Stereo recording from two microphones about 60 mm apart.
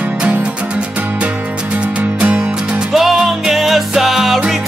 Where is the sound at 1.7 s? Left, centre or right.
Right.